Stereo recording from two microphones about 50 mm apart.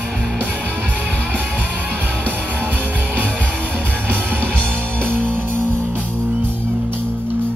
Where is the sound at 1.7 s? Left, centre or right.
Right.